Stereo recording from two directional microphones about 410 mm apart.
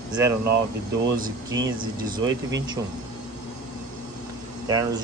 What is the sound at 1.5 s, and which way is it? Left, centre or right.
Speech, centre.